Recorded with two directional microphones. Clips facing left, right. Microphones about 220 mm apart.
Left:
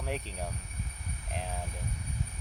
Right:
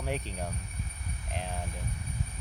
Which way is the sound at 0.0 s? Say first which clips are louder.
Right 2 dB; centre (ahead or behind).